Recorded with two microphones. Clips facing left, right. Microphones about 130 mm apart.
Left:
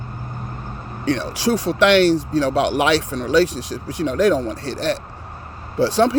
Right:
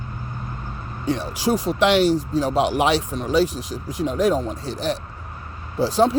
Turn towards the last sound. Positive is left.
turn(degrees=75)  # may be behind; listen again after turning